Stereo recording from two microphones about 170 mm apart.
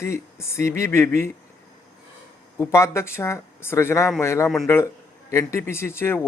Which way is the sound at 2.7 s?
15° left (ahead or behind).